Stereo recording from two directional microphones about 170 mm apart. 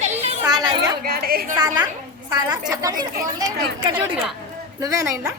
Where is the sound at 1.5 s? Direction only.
25° right (ahead or behind).